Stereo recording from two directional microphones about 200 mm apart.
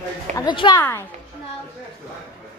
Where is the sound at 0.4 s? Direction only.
25° left (ahead or behind).